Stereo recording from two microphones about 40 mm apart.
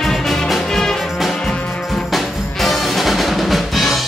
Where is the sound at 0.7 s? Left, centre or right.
Centre.